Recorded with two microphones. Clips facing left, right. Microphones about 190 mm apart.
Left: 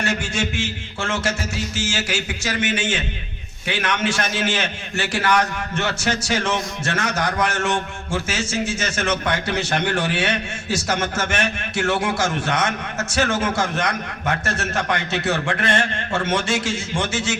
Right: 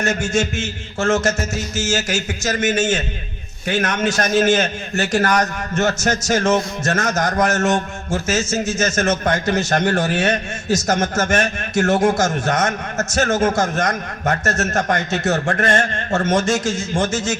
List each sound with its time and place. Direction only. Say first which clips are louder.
0.0 s a man's voice: right 5 dB; 45° right (ahead or behind)